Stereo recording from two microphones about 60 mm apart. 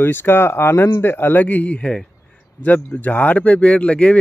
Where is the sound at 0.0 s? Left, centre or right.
Left.